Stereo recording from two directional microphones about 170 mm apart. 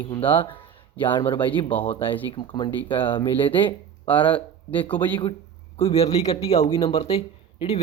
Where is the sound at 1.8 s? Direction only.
30° left (ahead or behind).